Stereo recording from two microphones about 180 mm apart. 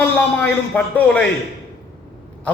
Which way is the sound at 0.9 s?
10° left (ahead or behind).